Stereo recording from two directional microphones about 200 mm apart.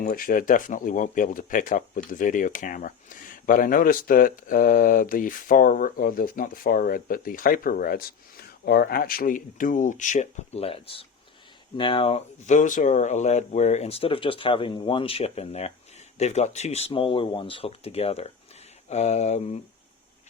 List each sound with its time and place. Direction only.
0.0 s speech: 45° left (ahead or behind)